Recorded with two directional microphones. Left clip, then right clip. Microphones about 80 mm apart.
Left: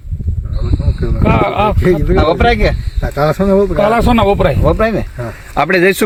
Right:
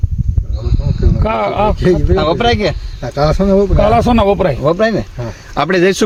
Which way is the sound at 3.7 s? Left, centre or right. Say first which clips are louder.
Even; left.